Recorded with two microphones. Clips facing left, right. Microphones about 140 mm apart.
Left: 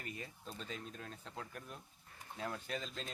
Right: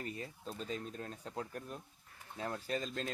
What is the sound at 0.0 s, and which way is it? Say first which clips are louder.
Speech: right 5 dB; 35° right (ahead or behind).